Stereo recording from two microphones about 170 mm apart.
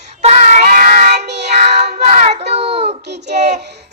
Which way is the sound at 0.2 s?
40° right (ahead or behind).